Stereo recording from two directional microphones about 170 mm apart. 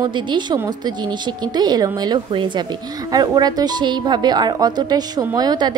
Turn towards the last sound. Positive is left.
turn(degrees=-25)  # may be behind; listen again after turning